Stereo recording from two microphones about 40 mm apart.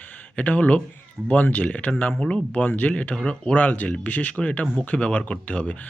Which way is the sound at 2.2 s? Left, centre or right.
Centre.